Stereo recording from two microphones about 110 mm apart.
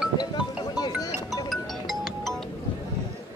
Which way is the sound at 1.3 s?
Centre (ahead or behind).